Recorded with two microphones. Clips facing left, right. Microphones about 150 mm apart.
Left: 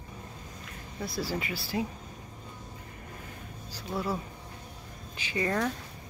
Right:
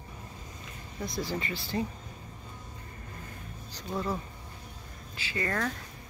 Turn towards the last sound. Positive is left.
turn(degrees=15)  # may be behind; listen again after turning